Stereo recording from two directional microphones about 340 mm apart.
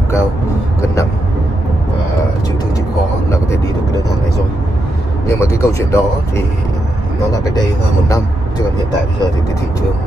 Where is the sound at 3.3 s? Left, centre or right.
Centre.